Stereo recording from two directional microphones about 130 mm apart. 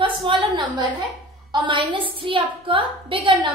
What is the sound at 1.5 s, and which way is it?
A woman's voice, 40° right (ahead or behind).